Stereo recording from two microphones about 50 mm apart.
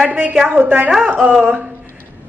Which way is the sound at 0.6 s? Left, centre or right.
Right.